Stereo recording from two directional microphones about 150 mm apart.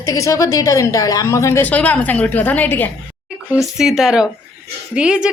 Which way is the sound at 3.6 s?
Centre (ahead or behind).